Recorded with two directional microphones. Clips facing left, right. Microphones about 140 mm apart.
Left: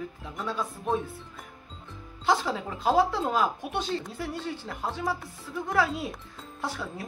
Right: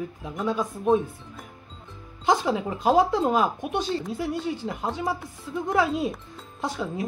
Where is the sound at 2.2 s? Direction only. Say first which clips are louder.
Right 4 dB; 15° right (ahead or behind).